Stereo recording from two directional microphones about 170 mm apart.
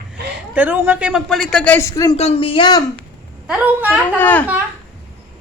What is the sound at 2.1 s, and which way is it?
Speech, 35° left (ahead or behind).